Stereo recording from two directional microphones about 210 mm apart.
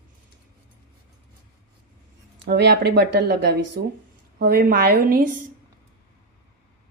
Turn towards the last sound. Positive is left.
turn(degrees=-45)  # may be behind; listen again after turning